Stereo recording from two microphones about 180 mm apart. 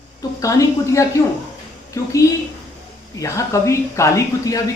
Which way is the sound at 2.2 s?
15° left (ahead or behind).